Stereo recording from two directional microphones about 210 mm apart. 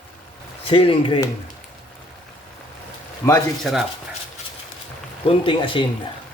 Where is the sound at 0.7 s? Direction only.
25° left (ahead or behind).